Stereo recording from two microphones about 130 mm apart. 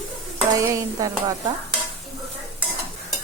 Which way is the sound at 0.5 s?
25° right (ahead or behind).